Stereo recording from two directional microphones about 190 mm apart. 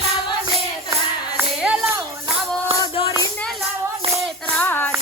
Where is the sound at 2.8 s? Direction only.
30° left (ahead or behind).